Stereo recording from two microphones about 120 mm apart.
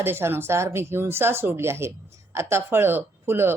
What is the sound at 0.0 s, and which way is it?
Speech, 20° right (ahead or behind).